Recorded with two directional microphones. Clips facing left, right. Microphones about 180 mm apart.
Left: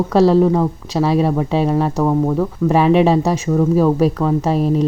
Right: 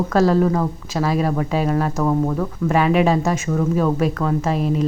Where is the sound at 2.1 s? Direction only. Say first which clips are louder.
Left 4 dB; 15° left (ahead or behind).